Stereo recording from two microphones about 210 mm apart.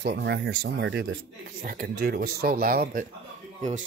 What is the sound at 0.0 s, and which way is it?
Speech, 50° right (ahead or behind).